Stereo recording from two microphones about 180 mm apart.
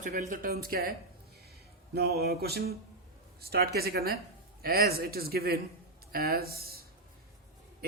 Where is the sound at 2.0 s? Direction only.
60° right (ahead or behind).